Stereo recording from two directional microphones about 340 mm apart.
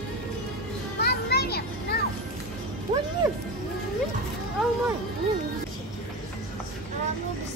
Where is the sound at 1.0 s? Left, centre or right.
Left.